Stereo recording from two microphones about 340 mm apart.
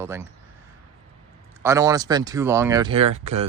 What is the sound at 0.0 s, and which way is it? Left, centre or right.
Speech, centre.